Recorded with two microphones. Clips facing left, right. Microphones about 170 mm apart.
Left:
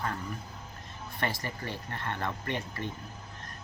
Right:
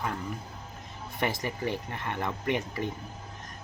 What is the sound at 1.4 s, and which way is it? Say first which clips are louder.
Speech: right 6 dB; 15° right (ahead or behind).